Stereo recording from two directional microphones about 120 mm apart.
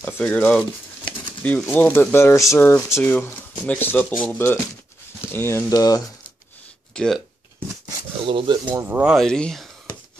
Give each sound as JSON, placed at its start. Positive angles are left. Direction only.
{"t": 0.0, "sound": "speech", "side_deg": 10}
{"t": 5.7, "sound": "speech", "side_deg": 30}
{"t": 6.9, "sound": "speech", "side_deg": 5}
{"t": 8.3, "sound": "speech", "side_deg": -40}
{"t": 8.8, "sound": "speech", "side_deg": -15}
{"t": 9.1, "sound": "speech", "side_deg": 5}